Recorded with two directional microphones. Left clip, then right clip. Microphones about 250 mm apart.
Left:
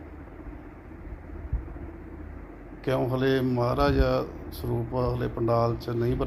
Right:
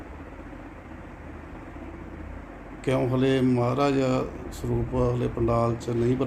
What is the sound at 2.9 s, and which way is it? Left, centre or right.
Speech, centre.